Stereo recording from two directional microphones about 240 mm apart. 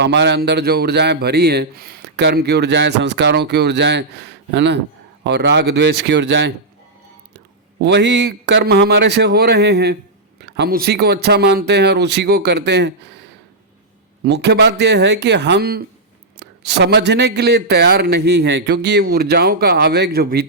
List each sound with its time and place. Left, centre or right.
0.0 s speech: right
7.8 s speech: right
14.3 s speech: right